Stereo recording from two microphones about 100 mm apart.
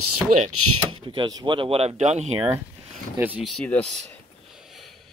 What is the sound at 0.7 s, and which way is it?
Speech, 55° right (ahead or behind).